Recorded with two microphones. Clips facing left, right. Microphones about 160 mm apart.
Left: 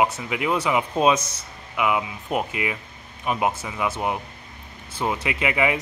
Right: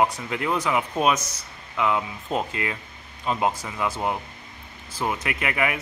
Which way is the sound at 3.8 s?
20° left (ahead or behind).